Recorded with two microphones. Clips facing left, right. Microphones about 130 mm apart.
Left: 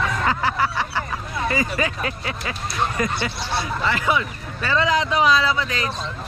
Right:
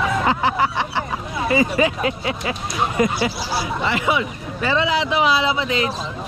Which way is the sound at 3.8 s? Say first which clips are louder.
Right 1 dB; 20° right (ahead or behind).